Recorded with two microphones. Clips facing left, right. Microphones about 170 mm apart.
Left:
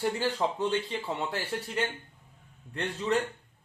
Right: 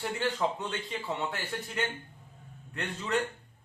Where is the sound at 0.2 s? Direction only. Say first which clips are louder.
Left 2 dB; 30° left (ahead or behind).